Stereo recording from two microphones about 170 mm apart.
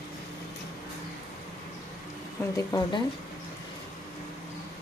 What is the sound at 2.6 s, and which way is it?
Speech, 20° left (ahead or behind).